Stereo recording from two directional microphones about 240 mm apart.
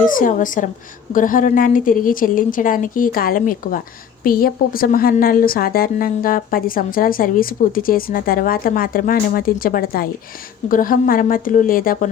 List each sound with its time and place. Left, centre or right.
0.1 s a woman's voice: left